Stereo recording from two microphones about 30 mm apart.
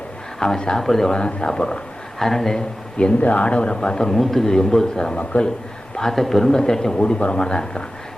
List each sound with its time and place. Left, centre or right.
0.3 s speech: centre
1.2 s a man's voice: left
2.1 s a man's voice: centre
3.2 s speech: left
3.4 s a man's voice: left
4.1 s speech: centre
4.4 s speech: centre
5.1 s a man's voice: left
6.0 s speech: centre
6.5 s speech: left